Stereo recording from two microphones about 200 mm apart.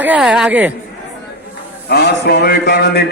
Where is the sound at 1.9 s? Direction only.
55° left (ahead or behind).